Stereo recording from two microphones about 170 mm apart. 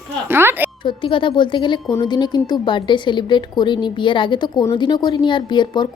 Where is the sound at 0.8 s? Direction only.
30° left (ahead or behind).